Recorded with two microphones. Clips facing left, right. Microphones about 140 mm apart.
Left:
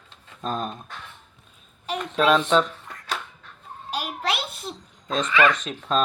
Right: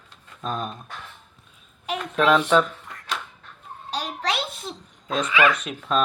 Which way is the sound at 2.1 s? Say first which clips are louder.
Right 1 dB; 20° left (ahead or behind).